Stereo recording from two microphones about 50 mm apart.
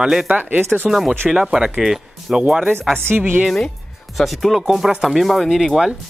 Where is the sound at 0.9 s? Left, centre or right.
Centre.